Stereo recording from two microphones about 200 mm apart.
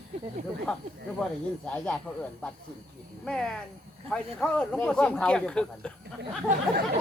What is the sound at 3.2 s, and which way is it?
Speech, 5° left (ahead or behind).